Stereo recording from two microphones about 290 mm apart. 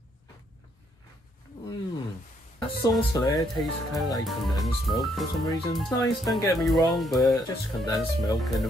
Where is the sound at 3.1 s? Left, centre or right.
Centre.